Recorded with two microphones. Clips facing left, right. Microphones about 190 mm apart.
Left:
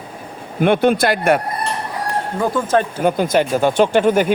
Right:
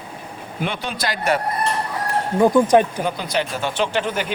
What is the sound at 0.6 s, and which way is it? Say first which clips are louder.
Speech: left 12 dB; 55° left (ahead or behind).